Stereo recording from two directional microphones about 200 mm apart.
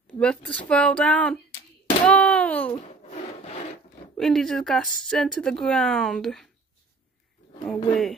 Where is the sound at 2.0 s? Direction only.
5° left (ahead or behind).